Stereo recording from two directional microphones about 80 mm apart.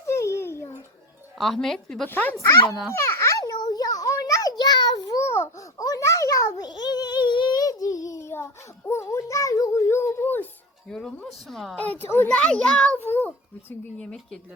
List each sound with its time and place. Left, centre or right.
0.1 s a sound: left
1.4 s speech: centre
2.0 s speech: left
2.9 s a sound: left
5.2 s a sound: left
7.6 s child singing: left
8.3 s child singing: left
10.8 s speech: centre
12.0 s speech: left
12.3 s a child's voice: centre
13.0 s a child's voice: left
14.0 s a child's voice: centre